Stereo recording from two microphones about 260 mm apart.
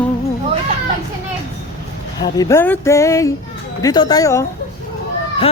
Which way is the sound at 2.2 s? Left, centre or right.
Centre.